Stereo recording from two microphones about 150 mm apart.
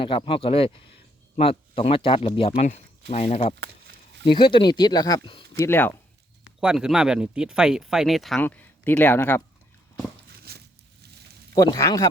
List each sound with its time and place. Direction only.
0.0 s speech: 35° left (ahead or behind)
4.2 s speech: 30° left (ahead or behind)
5.5 s speech: 15° left (ahead or behind)
6.4 s speech: 5° right (ahead or behind)
8.4 s speech: 10° left (ahead or behind)
10.5 s a sound: 90° right
11.5 s speech: 25° left (ahead or behind)